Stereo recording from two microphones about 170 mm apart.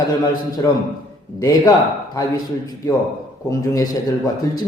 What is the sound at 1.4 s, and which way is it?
Speech, 20° left (ahead or behind).